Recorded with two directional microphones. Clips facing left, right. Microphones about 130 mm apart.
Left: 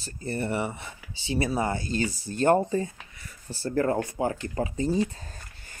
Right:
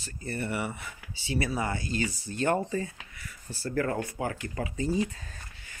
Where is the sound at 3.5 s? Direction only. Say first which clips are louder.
Left 4 dB; 25° left (ahead or behind).